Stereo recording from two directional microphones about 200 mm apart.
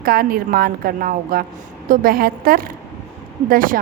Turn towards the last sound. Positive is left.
turn(degrees=-45)  # may be behind; listen again after turning